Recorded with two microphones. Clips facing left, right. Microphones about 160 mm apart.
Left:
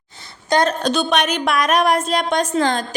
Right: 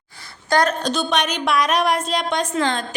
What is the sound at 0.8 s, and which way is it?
A woman's voice, 60° left (ahead or behind).